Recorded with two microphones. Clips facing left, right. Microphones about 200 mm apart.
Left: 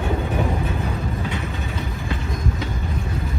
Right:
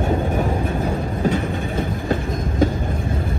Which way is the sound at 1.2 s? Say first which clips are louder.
Right 7 dB; 50° right (ahead or behind).